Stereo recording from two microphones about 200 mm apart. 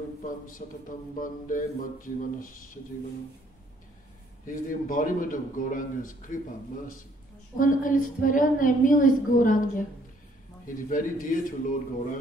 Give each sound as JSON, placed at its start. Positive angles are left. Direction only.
{"t": 0.2, "sound": "a woman's voice", "side_deg": 40}
{"t": 4.5, "sound": "a woman's voice", "side_deg": 40}
{"t": 7.5, "sound": "a woman's voice", "side_deg": 40}